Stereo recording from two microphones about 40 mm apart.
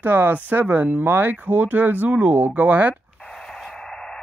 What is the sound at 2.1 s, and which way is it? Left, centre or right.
Speech, right.